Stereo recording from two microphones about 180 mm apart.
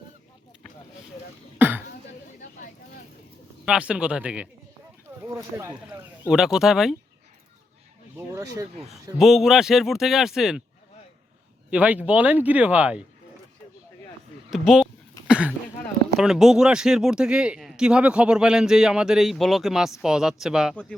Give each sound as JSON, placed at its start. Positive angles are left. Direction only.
{"t": 1.5, "sound": "throat clearing", "side_deg": -10}
{"t": 3.7, "sound": "speech", "side_deg": -5}
{"t": 6.2, "sound": "speech", "side_deg": 0}
{"t": 8.1, "sound": "speech", "side_deg": -15}
{"t": 9.1, "sound": "speech", "side_deg": 0}
{"t": 11.7, "sound": "speech", "side_deg": -10}
{"t": 14.5, "sound": "speech", "side_deg": 0}